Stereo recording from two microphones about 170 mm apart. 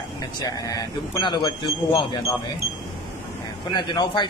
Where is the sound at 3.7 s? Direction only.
25° left (ahead or behind).